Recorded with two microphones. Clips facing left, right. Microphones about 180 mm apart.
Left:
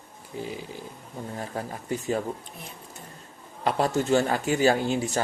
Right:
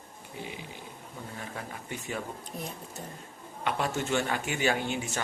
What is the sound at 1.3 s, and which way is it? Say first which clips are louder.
Speech: left 7 dB; 40° left (ahead or behind).